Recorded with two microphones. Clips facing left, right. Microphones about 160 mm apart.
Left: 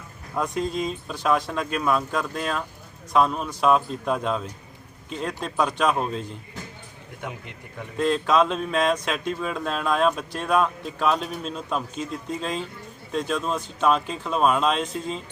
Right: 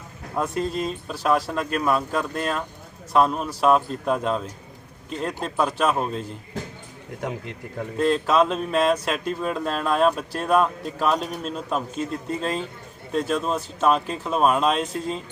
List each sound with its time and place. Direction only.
0.3 s speech: 5° right (ahead or behind)
7.2 s speech: 40° right (ahead or behind)
7.9 s speech: centre (ahead or behind)